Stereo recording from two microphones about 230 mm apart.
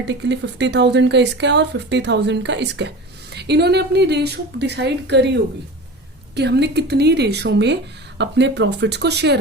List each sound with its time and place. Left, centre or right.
0.0 s speech: right